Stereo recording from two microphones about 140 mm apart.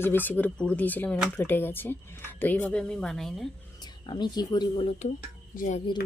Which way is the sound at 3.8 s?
30° left (ahead or behind).